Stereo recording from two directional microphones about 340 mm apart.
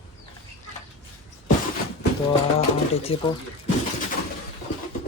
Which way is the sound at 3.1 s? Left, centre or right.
Centre.